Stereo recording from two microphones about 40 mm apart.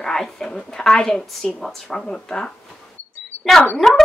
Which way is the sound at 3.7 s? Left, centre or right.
Centre.